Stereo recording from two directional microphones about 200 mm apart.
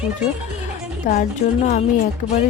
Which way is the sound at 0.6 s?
40° left (ahead or behind).